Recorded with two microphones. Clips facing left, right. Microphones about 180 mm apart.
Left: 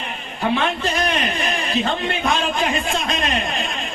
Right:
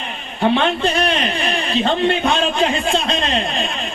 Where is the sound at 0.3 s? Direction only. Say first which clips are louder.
Right 4 dB; 25° right (ahead or behind).